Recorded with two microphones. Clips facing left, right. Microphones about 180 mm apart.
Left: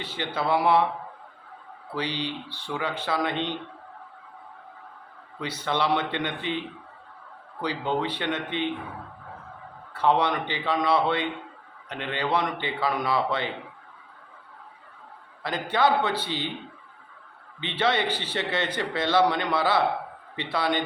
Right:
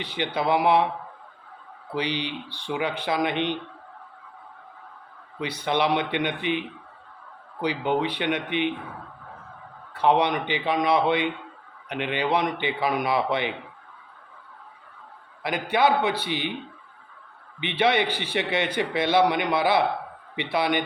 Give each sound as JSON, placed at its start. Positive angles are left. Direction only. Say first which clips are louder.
{"t": 0.0, "sound": "speech", "louder": "right 3 dB", "side_deg": -15}
{"t": 2.0, "sound": "speech", "louder": "right 2 dB", "side_deg": -15}
{"t": 5.4, "sound": "speech", "louder": "right 3 dB", "side_deg": -15}
{"t": 9.9, "sound": "speech", "louder": "right 2 dB", "side_deg": -15}
{"t": 15.4, "sound": "speech", "louder": "right 2 dB", "side_deg": -10}
{"t": 17.6, "sound": "speech", "louder": "right 3 dB", "side_deg": -15}